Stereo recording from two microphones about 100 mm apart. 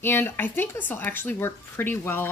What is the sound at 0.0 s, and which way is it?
A woman's voice, 20° left (ahead or behind).